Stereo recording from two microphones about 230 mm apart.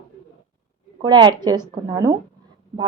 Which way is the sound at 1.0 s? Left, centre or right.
Centre.